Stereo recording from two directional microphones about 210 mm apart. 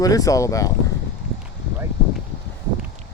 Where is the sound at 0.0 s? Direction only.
15° left (ahead or behind).